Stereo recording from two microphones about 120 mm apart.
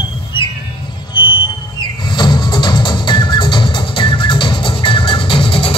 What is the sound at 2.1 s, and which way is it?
Music, 40° left (ahead or behind).